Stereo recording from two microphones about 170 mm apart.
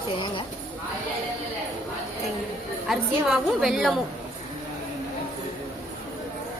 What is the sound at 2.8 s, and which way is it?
A woman's voice, centre (ahead or behind).